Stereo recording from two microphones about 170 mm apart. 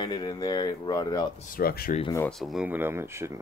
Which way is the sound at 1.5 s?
60° left (ahead or behind).